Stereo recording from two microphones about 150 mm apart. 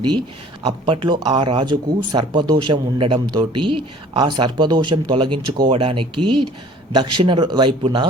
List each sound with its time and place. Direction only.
0.6 s speech: 35° right (ahead or behind)